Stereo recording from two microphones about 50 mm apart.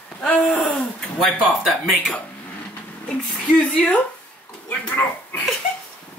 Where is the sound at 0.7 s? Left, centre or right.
Centre.